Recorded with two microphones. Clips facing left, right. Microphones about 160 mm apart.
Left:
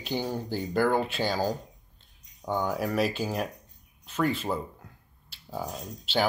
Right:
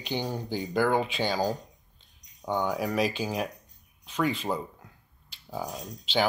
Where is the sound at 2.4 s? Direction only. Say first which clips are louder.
Even; 5° left (ahead or behind).